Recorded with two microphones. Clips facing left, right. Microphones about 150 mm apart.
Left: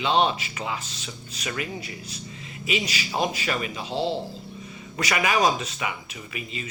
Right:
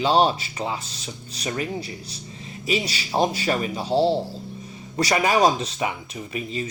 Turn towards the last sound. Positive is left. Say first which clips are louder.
# right 7 dB
turn(degrees=-35)  # may be behind; listen again after turning